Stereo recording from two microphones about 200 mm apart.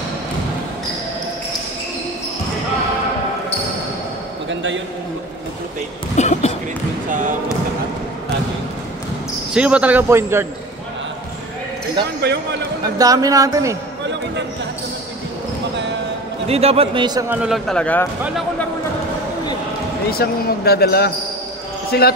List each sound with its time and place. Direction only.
4.5 s a sound: 70° right (ahead or behind)
6.1 s a sound: 35° left (ahead or behind)
7.1 s basketball bounce: 40° right (ahead or behind)
9.5 s a man's voice: 5° right (ahead or behind)
12.2 s speech: 55° right (ahead or behind)
12.9 s a man's voice: 15° right (ahead or behind)
16.4 s a man's voice: 30° right (ahead or behind)
17.3 s speech: 5° right (ahead or behind)
20.1 s speech: 50° left (ahead or behind)